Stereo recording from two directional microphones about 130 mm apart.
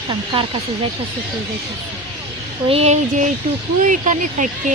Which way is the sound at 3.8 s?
75° right (ahead or behind).